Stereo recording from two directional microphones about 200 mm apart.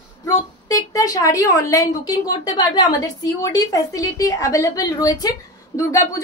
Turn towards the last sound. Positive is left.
turn(degrees=15)  # may be behind; listen again after turning